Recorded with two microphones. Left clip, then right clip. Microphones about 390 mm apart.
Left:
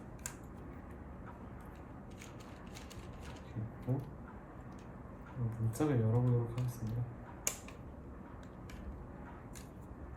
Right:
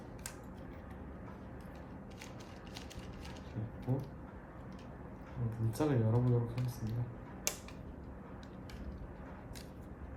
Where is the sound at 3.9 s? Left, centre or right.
Centre.